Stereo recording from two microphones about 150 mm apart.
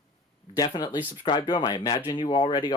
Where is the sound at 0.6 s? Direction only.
25° left (ahead or behind).